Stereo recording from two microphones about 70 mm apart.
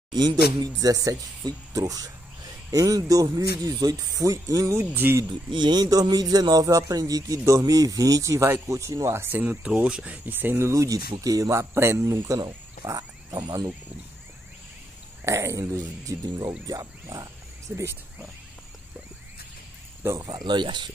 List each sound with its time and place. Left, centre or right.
0.7 s speech: right
4.9 s speech: right
5.6 s speech: right
9.1 s speech: right
9.4 s speech: right
10.7 s speech: right
11.7 s speech: right
12.8 s speech: right
15.2 s speech: right
20.1 s speech: right